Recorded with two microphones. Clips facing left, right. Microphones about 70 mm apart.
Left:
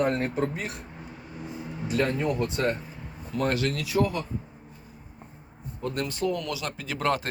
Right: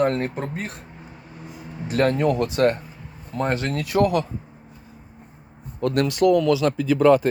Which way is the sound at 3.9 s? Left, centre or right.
Right.